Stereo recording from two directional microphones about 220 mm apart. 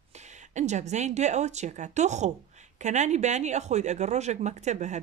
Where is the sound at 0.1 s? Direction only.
30° right (ahead or behind).